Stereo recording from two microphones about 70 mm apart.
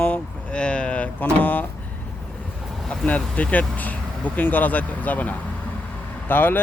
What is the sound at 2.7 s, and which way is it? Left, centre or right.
Vehicle, centre.